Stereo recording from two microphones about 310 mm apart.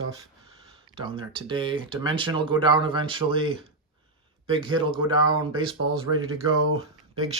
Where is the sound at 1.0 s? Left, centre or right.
Centre.